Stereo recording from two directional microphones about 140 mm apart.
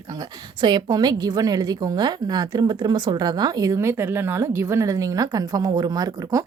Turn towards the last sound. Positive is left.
turn(degrees=-25)  # may be behind; listen again after turning